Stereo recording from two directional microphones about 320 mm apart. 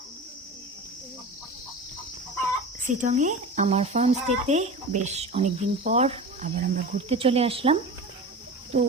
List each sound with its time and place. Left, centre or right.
2.8 s speech: right